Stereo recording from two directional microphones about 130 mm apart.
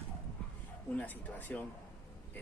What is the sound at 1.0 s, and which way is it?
Speech, 15° left (ahead or behind).